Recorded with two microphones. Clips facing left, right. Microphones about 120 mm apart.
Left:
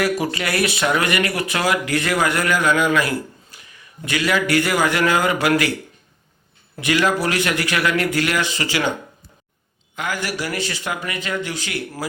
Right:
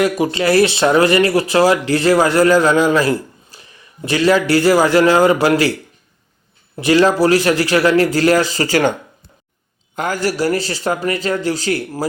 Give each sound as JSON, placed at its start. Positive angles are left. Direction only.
{"t": 0.0, "sound": "speech", "side_deg": -25}
{"t": 6.7, "sound": "speech", "side_deg": -35}
{"t": 9.9, "sound": "speech", "side_deg": -40}